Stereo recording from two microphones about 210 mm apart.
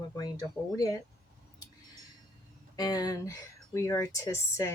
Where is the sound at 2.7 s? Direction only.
20° left (ahead or behind).